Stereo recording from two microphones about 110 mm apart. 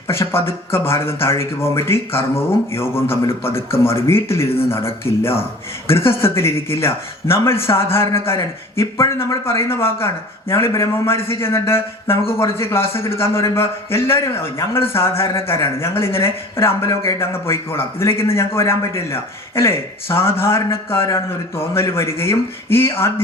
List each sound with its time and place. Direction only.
0.1 s speech: 25° left (ahead or behind)